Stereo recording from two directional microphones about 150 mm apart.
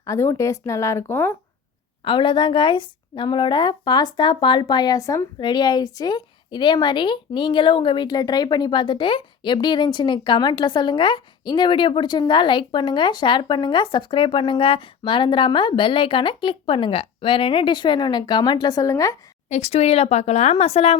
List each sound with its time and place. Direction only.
0.0 s speech: 20° left (ahead or behind)
2.0 s a woman's voice: 35° left (ahead or behind)
19.5 s speech: 45° left (ahead or behind)